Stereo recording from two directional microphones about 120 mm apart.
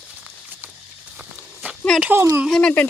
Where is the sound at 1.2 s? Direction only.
10° right (ahead or behind).